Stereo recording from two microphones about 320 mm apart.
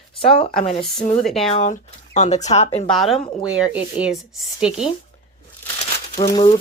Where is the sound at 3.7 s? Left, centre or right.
Centre.